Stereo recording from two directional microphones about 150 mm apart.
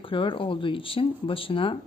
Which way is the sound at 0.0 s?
35° left (ahead or behind).